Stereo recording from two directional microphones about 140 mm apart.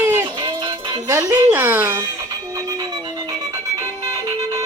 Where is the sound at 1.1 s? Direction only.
25° right (ahead or behind).